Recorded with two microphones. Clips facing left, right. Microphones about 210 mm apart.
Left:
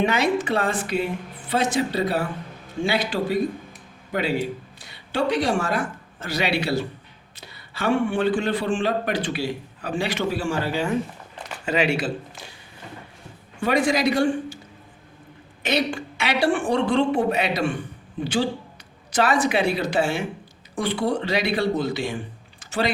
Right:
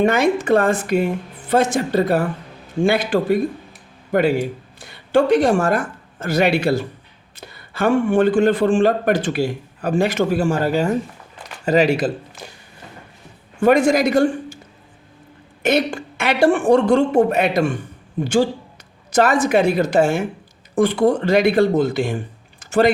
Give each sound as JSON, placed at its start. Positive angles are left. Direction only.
{"t": 0.0, "sound": "a man's voice", "side_deg": -50}
{"t": 13.6, "sound": "a man's voice", "side_deg": -45}
{"t": 15.6, "sound": "a man's voice", "side_deg": -50}